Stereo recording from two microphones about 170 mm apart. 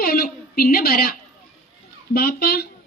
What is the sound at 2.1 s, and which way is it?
Speech, 65° left (ahead or behind).